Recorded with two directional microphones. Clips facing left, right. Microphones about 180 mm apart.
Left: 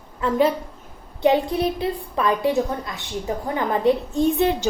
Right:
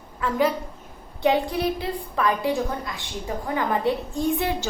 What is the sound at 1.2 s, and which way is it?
A woman's voice, 20° left (ahead or behind).